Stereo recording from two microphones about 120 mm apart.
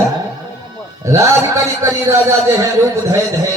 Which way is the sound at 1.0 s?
25° right (ahead or behind).